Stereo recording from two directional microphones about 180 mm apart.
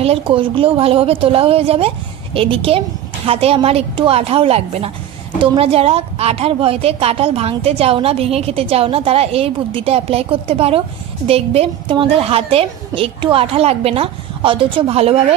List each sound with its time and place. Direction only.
0.0 s a woman's voice: 30° right (ahead or behind)